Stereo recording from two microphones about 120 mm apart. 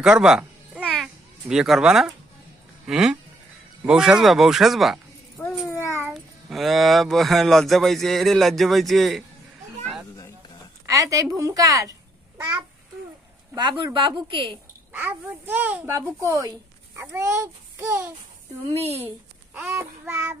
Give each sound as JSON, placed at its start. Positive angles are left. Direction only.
{"t": 0.0, "sound": "cat", "side_deg": -5}
{"t": 1.0, "sound": "speech", "side_deg": -5}
{"t": 5.4, "sound": "a sound", "side_deg": 15}
{"t": 6.1, "sound": "speech", "side_deg": 0}
{"t": 10.9, "sound": "speech", "side_deg": -30}
{"t": 13.6, "sound": "a woman's voice", "side_deg": -40}
{"t": 14.9, "sound": "speech", "side_deg": -15}
{"t": 15.9, "sound": "speech", "side_deg": -25}
{"t": 16.9, "sound": "a child's voice", "side_deg": -20}
{"t": 18.8, "sound": "speech", "side_deg": -60}
{"t": 19.5, "sound": "speech", "side_deg": -15}